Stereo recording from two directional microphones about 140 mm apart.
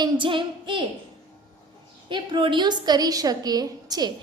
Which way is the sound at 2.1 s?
35° right (ahead or behind).